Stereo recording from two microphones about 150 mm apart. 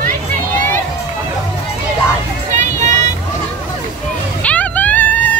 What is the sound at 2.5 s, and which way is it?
Vehicle, 55° right (ahead or behind).